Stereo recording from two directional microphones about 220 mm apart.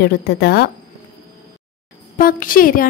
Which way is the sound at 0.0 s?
45° left (ahead or behind).